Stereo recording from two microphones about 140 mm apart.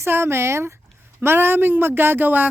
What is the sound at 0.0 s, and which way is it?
A woman's voice, 15° right (ahead or behind).